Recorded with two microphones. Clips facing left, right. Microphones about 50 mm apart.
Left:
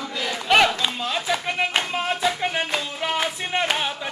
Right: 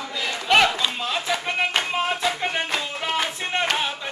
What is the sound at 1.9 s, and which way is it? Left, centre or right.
Music, centre.